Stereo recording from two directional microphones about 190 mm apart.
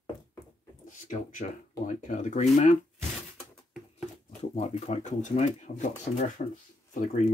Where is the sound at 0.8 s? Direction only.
45° left (ahead or behind).